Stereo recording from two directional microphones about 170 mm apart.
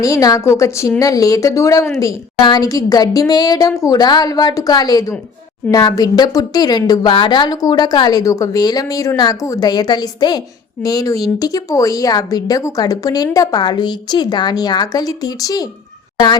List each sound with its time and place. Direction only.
0.0 s speech: 20° left (ahead or behind)